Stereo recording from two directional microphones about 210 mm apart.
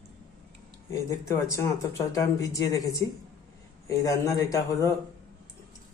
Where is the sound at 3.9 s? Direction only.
15° left (ahead or behind).